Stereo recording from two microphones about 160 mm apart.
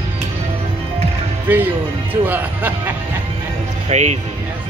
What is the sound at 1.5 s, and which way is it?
Speech, 10° right (ahead or behind).